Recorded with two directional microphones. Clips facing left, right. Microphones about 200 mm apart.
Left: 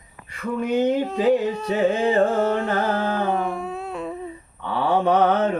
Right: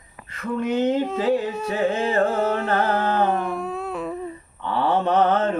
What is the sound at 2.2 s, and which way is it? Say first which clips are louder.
Carnatic music: left 2 dB; centre (ahead or behind).